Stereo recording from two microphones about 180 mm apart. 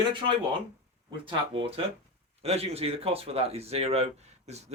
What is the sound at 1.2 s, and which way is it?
Speech, 30° right (ahead or behind).